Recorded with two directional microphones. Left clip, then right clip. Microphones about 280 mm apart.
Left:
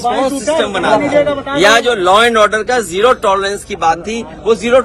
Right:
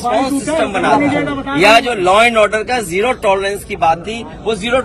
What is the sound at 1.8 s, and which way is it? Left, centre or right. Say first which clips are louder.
Speech: left 1 dB; centre.